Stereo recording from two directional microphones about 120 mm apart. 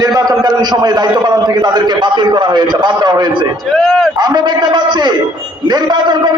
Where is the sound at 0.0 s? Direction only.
30° right (ahead or behind).